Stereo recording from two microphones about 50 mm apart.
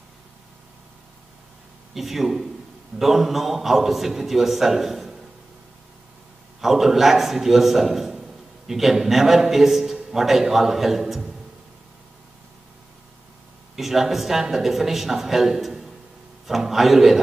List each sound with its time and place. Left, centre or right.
2.0 s a man's voice: centre
6.6 s a man's voice: centre
13.7 s a man's voice: centre